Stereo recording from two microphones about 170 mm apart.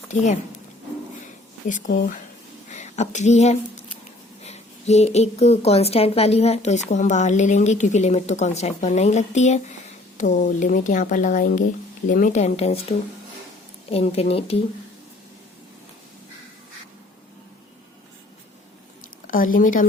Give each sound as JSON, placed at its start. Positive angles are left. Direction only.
{"t": 1.6, "sound": "a woman's voice", "side_deg": 50}
{"t": 2.6, "sound": "a sound", "side_deg": 45}
{"t": 4.4, "sound": "a woman's voice", "side_deg": 40}
{"t": 13.9, "sound": "a woman's voice", "side_deg": 35}
{"t": 19.3, "sound": "a woman's voice", "side_deg": 55}